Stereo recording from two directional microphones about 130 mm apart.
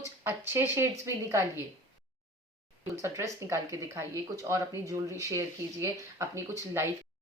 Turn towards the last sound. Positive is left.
turn(degrees=-20)  # may be behind; listen again after turning